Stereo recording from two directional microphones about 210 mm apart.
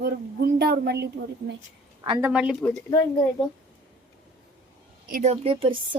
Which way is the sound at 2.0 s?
20° right (ahead or behind).